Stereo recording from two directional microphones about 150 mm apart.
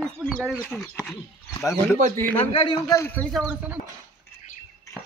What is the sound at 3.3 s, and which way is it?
Speech, 10° right (ahead or behind).